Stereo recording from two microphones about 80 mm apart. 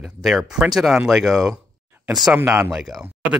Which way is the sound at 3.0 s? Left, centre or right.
Centre.